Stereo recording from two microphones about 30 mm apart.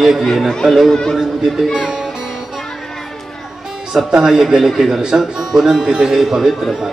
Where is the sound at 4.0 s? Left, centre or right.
Centre.